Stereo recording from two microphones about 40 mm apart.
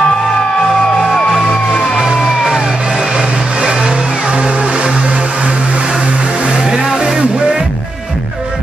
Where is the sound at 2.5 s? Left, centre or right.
Centre.